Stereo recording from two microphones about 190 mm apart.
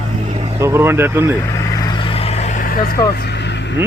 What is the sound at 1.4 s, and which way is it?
Vehicle, 15° left (ahead or behind).